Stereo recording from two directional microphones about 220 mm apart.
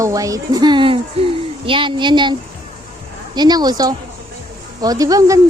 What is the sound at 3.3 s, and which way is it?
Speech, 20° right (ahead or behind).